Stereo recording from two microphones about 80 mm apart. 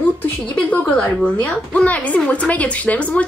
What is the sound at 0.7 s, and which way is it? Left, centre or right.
A woman's voice, centre.